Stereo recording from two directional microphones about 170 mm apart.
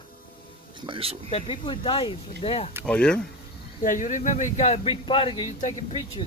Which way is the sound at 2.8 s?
5° left (ahead or behind).